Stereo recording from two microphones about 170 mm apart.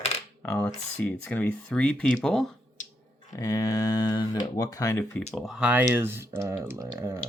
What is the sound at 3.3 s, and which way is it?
Speech, 20° left (ahead or behind).